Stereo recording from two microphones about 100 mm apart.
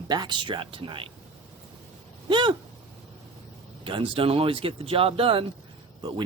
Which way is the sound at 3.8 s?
60° right (ahead or behind).